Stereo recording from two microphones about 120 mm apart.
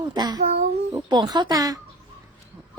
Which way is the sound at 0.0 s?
35° right (ahead or behind).